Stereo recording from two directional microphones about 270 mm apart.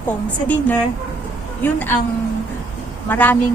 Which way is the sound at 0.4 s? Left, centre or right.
Centre.